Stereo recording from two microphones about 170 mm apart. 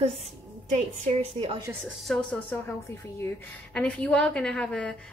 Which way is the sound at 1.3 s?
30° right (ahead or behind).